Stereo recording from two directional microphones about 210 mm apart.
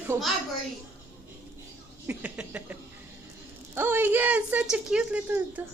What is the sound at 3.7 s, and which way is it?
Speech, 10° right (ahead or behind).